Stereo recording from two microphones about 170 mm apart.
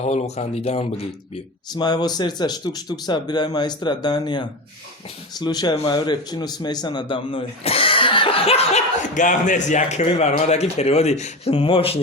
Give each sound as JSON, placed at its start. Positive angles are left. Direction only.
{"t": 0.0, "sound": "a man's voice", "side_deg": 40}
{"t": 1.7, "sound": "a man's voice", "side_deg": 25}